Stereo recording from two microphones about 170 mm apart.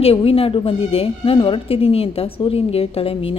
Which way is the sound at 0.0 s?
35° left (ahead or behind).